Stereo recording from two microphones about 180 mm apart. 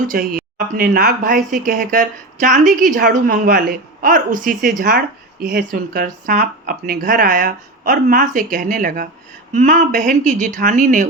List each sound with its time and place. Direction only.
0.1 s speech: 50° right (ahead or behind)